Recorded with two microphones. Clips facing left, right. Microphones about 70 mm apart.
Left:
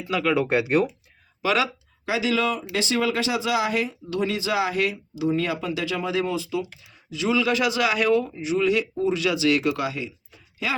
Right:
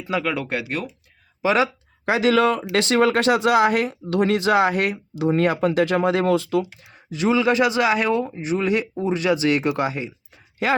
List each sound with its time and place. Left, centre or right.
0.3 s speech: centre
1.4 s speech: right
2.0 s speech: right
6.9 s speech: right
8.4 s speech: right